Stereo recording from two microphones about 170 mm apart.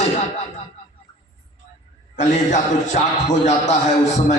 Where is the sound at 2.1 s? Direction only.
45° left (ahead or behind).